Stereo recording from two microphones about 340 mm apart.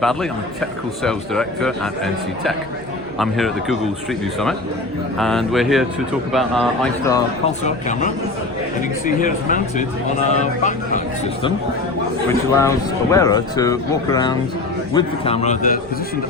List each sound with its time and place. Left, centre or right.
0.0 s speech: centre
3.2 s speech: centre
5.2 s speech: centre
7.6 s a man's voice: left
12.3 s a man's voice: centre